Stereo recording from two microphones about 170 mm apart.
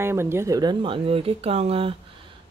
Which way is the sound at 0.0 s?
15° right (ahead or behind).